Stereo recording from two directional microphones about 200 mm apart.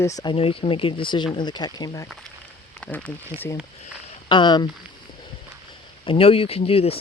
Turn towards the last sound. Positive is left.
turn(degrees=30)  # may be behind; listen again after turning